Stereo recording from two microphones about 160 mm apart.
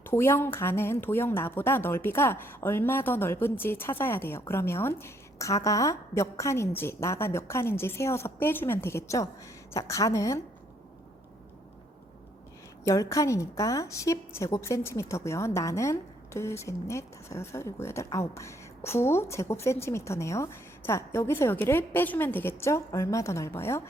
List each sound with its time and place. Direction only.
0.0 s a woman's voice: 15° left (ahead or behind)
12.8 s a woman's voice: 20° left (ahead or behind)